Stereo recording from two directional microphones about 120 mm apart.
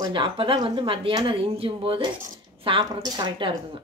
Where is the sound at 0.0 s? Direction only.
45° right (ahead or behind).